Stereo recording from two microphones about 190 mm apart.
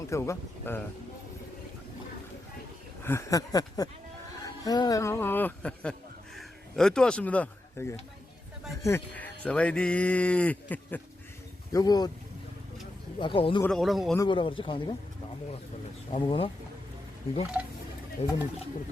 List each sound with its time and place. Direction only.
0.1 s speech: 15° left (ahead or behind)
3.0 s speech: 15° left (ahead or behind)
11.7 s speech: 20° left (ahead or behind)
13.1 s speech: 25° left (ahead or behind)
13.6 s speech: 5° left (ahead or behind)
14.2 s speech: 25° left (ahead or behind)
16.1 s speech: 30° left (ahead or behind)
18.2 s speech: 35° left (ahead or behind)